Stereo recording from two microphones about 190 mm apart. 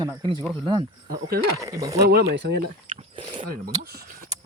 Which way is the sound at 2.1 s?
55° right (ahead or behind).